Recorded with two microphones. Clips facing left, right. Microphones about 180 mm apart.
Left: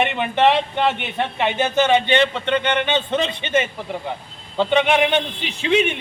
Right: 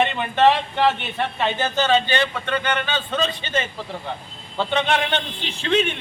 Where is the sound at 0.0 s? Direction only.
20° left (ahead or behind).